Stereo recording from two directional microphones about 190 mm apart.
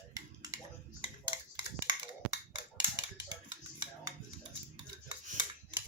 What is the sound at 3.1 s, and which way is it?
Music, 20° right (ahead or behind).